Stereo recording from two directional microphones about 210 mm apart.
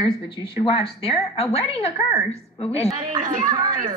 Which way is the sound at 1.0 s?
30° left (ahead or behind).